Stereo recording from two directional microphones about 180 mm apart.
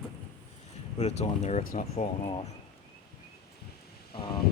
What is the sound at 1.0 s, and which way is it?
Speech, 35° left (ahead or behind).